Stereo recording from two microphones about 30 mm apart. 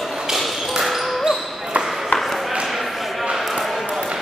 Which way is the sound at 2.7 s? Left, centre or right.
Centre.